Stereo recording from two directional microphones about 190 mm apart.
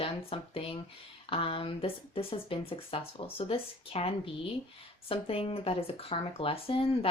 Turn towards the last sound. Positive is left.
turn(degrees=30)  # may be behind; listen again after turning